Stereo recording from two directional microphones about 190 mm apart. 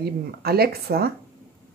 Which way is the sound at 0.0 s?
55° right (ahead or behind).